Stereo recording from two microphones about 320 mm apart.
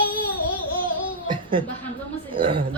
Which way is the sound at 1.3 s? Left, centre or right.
Centre.